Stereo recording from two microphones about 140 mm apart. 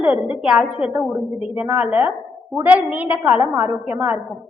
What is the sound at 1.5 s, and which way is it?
A woman's voice, 10° right (ahead or behind).